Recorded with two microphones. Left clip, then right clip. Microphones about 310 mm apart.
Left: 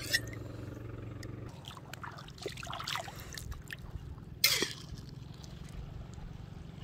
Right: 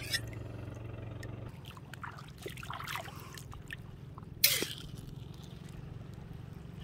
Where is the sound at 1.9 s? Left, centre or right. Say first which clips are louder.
Right 2 dB; left.